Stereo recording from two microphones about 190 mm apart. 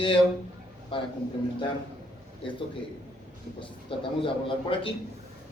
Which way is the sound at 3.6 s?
25° left (ahead or behind).